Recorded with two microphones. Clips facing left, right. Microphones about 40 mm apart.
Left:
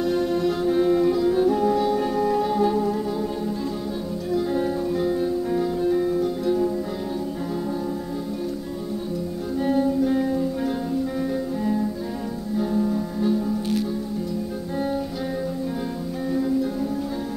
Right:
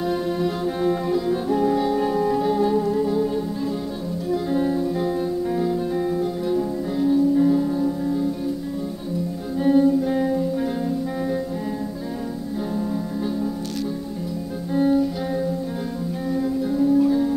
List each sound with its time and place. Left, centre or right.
0.0 s music: centre
4.3 s music: centre
9.6 s music: centre
14.8 s music: centre